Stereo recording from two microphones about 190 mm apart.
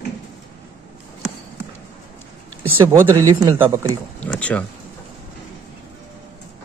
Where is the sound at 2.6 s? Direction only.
15° right (ahead or behind).